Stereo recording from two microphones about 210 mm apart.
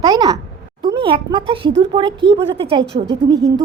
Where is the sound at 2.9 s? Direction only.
35° right (ahead or behind).